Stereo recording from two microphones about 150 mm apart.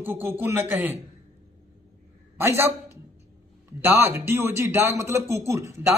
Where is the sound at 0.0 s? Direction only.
15° right (ahead or behind).